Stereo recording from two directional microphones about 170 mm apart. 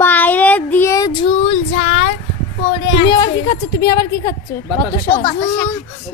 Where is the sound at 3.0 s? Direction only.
25° left (ahead or behind).